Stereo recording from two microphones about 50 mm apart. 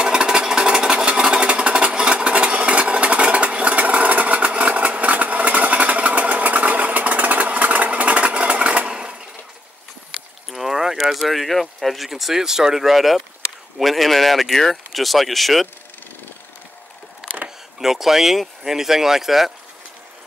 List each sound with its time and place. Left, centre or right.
0.0 s engine: centre
10.5 s boat: centre
11.1 s speech: centre
17.2 s a sound: centre
17.7 s speech: centre